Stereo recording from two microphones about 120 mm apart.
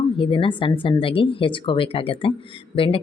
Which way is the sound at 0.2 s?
45° left (ahead or behind).